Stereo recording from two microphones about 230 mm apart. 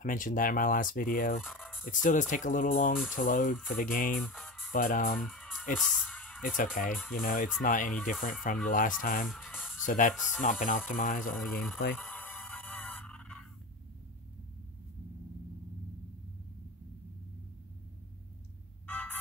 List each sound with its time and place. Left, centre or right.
0.0 s speech: left
1.4 s fowl: centre
1.9 s speech: left
4.2 s music: centre
4.7 s speech: left
5.2 s music: centre
6.4 s speech: left
9.3 s speech: centre
9.8 s speech: left
11.3 s speech: centre
11.9 s music: centre
18.9 s music: centre